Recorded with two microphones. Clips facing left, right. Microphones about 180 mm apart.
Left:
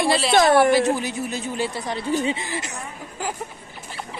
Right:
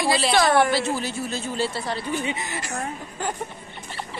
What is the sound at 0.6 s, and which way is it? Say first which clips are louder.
Speech: left 4 dB; 15° left (ahead or behind).